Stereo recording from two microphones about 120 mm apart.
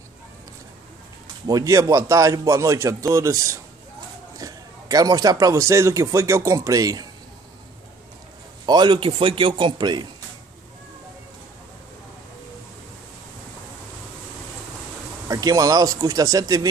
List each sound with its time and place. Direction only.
1.2 s speech: 30° right (ahead or behind)
8.6 s a man's voice: 35° right (ahead or behind)
15.2 s speech: 30° right (ahead or behind)